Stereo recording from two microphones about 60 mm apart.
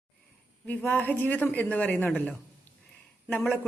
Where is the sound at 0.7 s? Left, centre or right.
Left.